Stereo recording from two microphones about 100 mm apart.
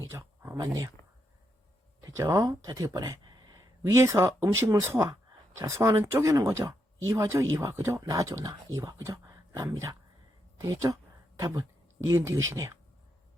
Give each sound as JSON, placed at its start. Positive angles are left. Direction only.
{"t": 0.1, "sound": "speech", "side_deg": -30}
{"t": 2.0, "sound": "speech", "side_deg": -30}
{"t": 3.9, "sound": "speech", "side_deg": -30}